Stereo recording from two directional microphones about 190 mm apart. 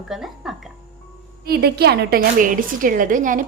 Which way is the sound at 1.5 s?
55° right (ahead or behind).